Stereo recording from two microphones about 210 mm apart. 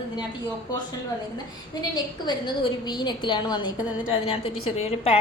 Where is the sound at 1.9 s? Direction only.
20° left (ahead or behind).